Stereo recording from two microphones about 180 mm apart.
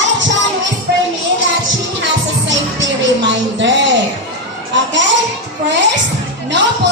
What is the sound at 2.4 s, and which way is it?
Music, 90° right.